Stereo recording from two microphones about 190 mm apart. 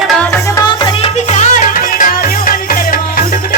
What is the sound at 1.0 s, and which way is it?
Music, 40° left (ahead or behind).